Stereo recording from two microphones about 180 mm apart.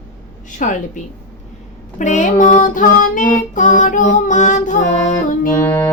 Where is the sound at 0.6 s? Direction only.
45° left (ahead or behind).